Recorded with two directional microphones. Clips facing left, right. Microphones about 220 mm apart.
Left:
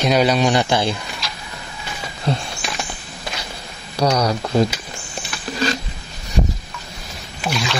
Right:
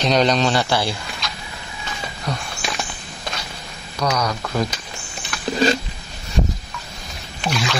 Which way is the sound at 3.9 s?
30° left (ahead or behind).